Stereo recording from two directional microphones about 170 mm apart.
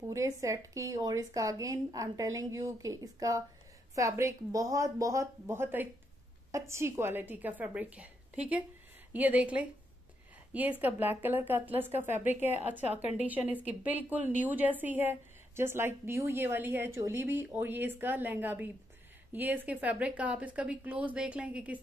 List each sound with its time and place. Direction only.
0.0 s a woman's voice: 20° right (ahead or behind)
9.1 s a woman's voice: 10° right (ahead or behind)